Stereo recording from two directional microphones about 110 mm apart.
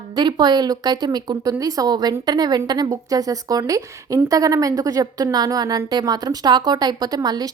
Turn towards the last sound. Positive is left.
turn(degrees=-35)  # may be behind; listen again after turning